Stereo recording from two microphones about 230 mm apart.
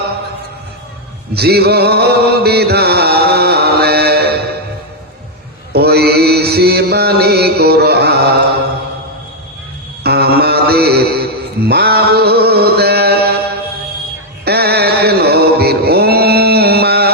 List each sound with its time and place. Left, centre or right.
1.3 s music: right
5.7 s mantra: right
10.0 s mantra: right
14.4 s mantra: right